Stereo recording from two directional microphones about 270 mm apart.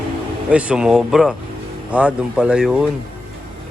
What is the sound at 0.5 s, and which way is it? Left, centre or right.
Speech, centre.